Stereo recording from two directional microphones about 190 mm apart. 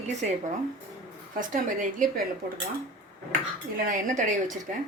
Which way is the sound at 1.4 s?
45° right (ahead or behind).